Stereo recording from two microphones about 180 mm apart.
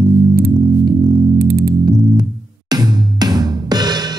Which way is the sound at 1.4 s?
55° right (ahead or behind).